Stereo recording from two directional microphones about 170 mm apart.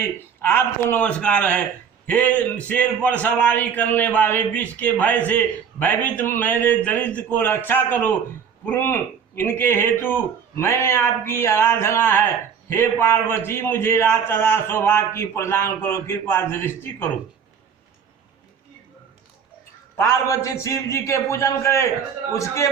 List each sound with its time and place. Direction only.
0.0 s speech: 15° left (ahead or behind)
20.0 s speech: 15° left (ahead or behind)